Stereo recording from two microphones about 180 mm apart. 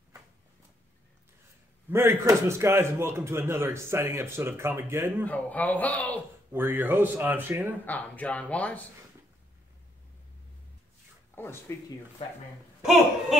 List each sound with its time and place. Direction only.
1.9 s a man's voice: 15° right (ahead or behind)
5.2 s speech: 10° left (ahead or behind)
6.5 s a man's voice: 10° right (ahead or behind)
7.8 s speech: 10° left (ahead or behind)
11.7 s speech: 15° left (ahead or behind)